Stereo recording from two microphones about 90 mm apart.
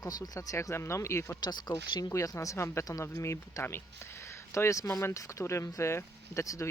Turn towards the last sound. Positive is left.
turn(degrees=35)  # may be behind; listen again after turning